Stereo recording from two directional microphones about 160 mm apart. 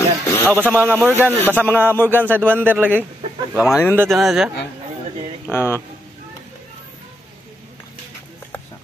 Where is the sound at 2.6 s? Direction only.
10° right (ahead or behind).